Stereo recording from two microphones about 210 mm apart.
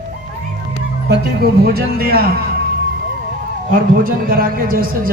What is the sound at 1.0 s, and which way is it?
A man's voice, 50° right (ahead or behind).